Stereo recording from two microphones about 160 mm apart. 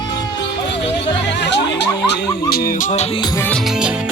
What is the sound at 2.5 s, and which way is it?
Music, 60° left (ahead or behind).